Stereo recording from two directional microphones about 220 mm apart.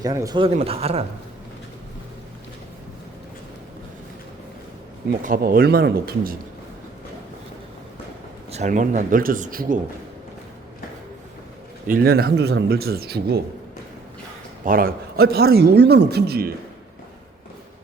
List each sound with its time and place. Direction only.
0.0 s speech: 15° right (ahead or behind)
5.2 s a man's voice: 40° right (ahead or behind)
8.5 s speech: 35° right (ahead or behind)
11.9 s a man's voice: 45° right (ahead or behind)
14.6 s a man's voice: 40° right (ahead or behind)